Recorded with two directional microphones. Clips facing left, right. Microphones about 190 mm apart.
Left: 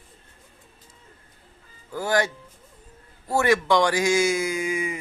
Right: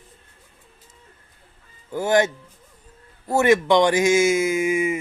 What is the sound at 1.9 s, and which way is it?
A man's voice, 20° right (ahead or behind).